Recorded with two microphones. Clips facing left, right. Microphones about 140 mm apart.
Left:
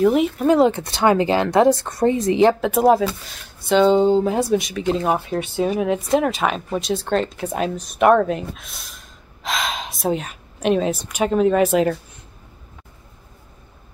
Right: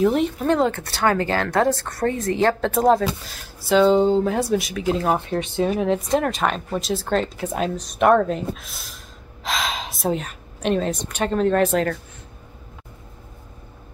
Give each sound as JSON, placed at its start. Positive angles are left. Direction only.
{"t": 0.0, "sound": "speech", "side_deg": 5}
{"t": 0.7, "sound": "speech", "side_deg": 15}